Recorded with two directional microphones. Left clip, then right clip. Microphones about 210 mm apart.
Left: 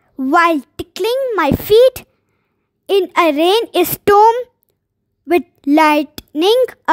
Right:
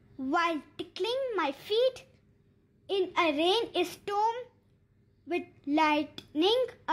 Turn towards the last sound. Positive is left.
turn(degrees=55)  # may be behind; listen again after turning